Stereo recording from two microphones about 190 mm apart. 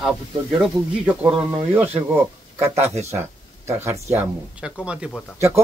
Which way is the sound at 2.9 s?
35° right (ahead or behind).